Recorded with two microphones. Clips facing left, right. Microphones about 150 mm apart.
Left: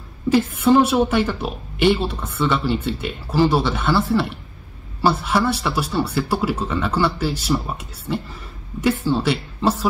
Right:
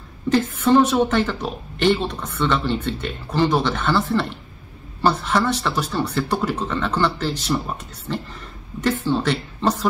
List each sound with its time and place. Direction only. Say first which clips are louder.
0.3 s a woman's voice: left 1 dB; 10° left (ahead or behind)